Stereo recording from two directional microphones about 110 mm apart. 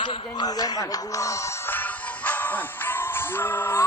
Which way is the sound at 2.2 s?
15° left (ahead or behind).